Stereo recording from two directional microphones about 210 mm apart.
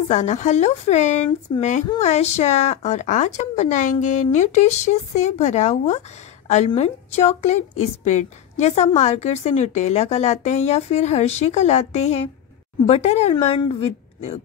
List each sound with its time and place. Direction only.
0.1 s a woman's voice: 35° left (ahead or behind)